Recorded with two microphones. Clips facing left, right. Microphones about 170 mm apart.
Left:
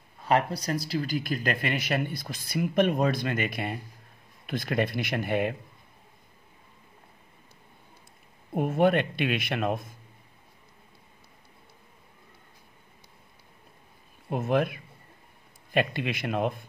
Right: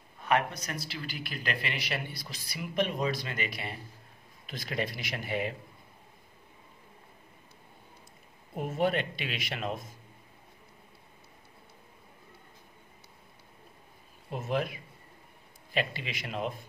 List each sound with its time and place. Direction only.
0.3 s speech: 35° left (ahead or behind); by 5.5 s 55° left (ahead or behind)
8.5 s speech: 55° left (ahead or behind)
14.3 s speech: 55° left (ahead or behind)